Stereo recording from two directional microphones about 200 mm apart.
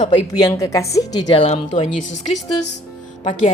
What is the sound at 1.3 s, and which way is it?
Speech, 30° left (ahead or behind).